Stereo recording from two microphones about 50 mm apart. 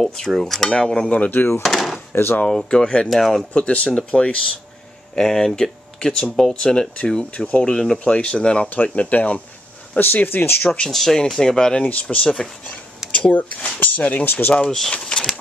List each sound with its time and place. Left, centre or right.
0.0 s speech: centre
1.6 s speech: centre
3.5 s speech: left
5.1 s speech: centre
7.3 s speech: left
9.9 s speech: left
10.9 s speech: centre
11.8 s speech: left
12.3 s speech: centre
13.1 s speech: left
14.7 s speech: centre